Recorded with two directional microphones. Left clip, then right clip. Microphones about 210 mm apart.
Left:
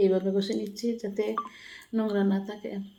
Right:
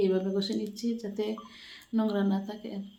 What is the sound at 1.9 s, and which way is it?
Speech, 5° left (ahead or behind).